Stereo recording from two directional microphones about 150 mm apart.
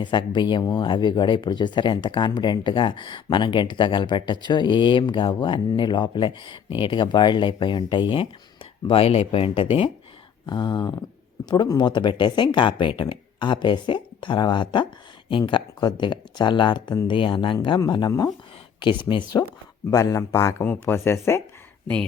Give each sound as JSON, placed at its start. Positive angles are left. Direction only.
{"t": 0.0, "sound": "a man's voice", "side_deg": 30}